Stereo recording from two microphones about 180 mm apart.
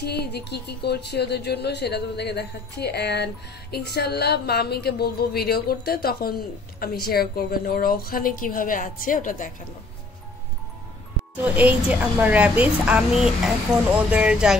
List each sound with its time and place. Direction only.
0.0 s a woman's voice: 65° left (ahead or behind); by 9.5 s 50° left (ahead or behind)
11.4 s a woman's voice: 10° right (ahead or behind)